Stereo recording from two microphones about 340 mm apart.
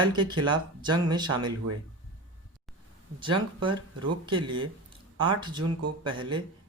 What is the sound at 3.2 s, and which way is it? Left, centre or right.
Speech, centre.